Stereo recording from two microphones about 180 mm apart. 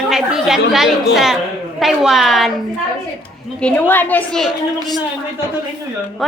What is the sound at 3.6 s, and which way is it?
Speech, 10° left (ahead or behind).